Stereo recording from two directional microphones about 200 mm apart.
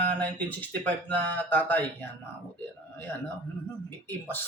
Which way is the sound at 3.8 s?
10° left (ahead or behind).